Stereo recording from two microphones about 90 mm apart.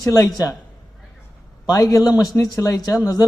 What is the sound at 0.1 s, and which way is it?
Speech, 45° left (ahead or behind).